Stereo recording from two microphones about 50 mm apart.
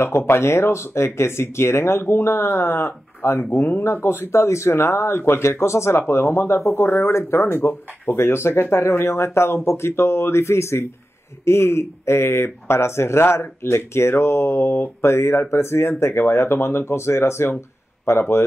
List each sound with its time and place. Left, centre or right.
0.3 s speech: left